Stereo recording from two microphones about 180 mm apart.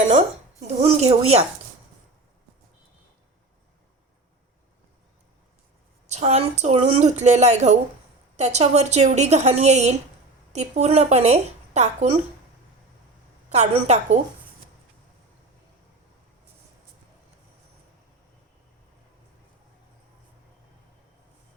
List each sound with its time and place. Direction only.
0.8 s a woman's voice: 35° right (ahead or behind)
6.1 s a woman's voice: 35° right (ahead or behind)
13.5 s a woman's voice: 40° right (ahead or behind)